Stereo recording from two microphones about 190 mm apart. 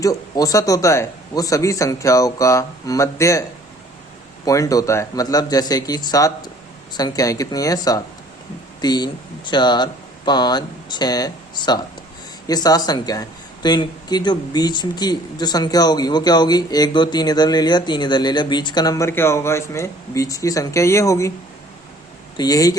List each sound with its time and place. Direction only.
0.0 s speech: 20° left (ahead or behind)
4.4 s speech: 20° left (ahead or behind)
22.4 s speech: 20° left (ahead or behind)